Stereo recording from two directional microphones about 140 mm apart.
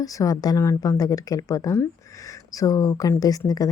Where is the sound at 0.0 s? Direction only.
25° left (ahead or behind).